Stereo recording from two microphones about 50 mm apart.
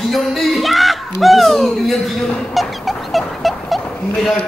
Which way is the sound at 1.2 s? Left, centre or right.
Centre.